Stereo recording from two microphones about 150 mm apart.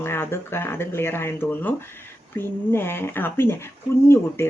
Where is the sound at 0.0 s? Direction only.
15° left (ahead or behind).